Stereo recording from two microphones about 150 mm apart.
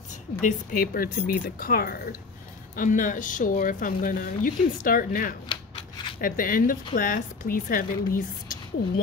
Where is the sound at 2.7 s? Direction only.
60° left (ahead or behind).